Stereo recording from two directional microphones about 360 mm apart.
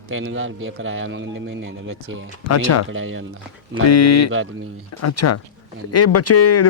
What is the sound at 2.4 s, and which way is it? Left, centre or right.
Speech, left.